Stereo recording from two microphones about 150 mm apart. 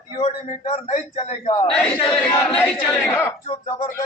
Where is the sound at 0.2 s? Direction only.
50° left (ahead or behind).